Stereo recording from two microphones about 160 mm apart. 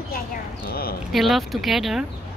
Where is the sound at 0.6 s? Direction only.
70° left (ahead or behind).